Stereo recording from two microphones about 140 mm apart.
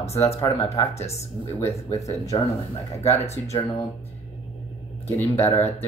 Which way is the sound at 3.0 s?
50° left (ahead or behind).